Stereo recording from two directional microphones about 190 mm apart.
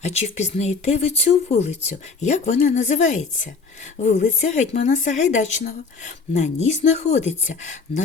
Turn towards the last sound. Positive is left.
turn(degrees=40)  # may be behind; listen again after turning